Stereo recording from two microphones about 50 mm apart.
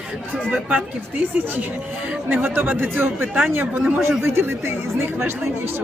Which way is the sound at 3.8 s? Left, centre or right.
Centre.